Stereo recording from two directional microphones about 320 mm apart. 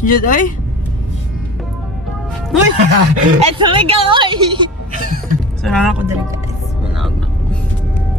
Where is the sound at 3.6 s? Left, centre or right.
Centre.